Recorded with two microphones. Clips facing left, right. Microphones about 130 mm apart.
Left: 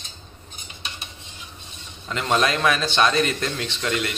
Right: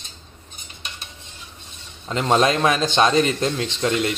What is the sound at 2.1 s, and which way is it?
A man's voice, 30° right (ahead or behind).